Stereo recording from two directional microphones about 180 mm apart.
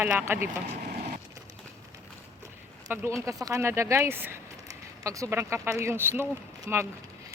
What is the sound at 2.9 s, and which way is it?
Speech, 15° right (ahead or behind).